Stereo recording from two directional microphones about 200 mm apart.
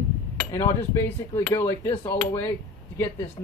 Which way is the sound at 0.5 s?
15° left (ahead or behind).